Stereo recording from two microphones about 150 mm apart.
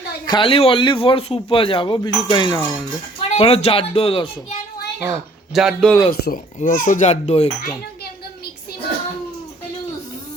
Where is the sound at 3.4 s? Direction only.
40° left (ahead or behind).